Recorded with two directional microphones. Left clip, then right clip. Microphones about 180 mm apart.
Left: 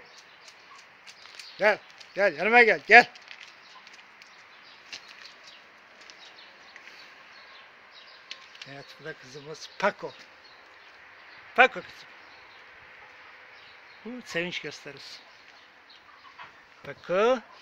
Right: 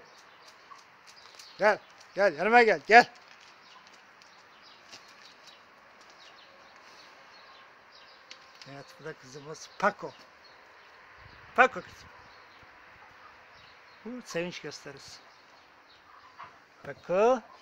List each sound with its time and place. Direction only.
1.6 s speech: centre (ahead or behind)
8.3 s speech: 5° left (ahead or behind)
11.5 s a man's voice: 5° left (ahead or behind)
14.2 s speech: 5° left (ahead or behind)
16.8 s speech: centre (ahead or behind)